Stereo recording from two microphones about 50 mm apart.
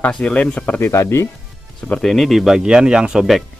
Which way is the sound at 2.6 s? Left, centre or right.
Centre.